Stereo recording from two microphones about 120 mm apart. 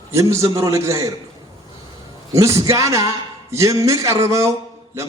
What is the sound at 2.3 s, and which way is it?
Speech, 25° right (ahead or behind).